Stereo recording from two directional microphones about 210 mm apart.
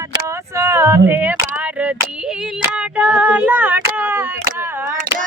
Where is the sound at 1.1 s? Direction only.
5° right (ahead or behind).